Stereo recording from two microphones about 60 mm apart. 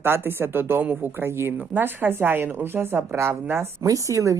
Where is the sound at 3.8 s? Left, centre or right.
Right.